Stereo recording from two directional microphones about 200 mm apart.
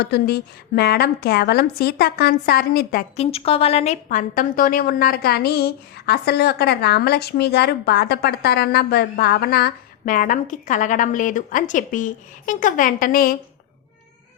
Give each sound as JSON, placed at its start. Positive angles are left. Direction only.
{"t": 0.0, "sound": "a woman's voice", "side_deg": 55}
{"t": 3.2, "sound": "a woman's voice", "side_deg": 30}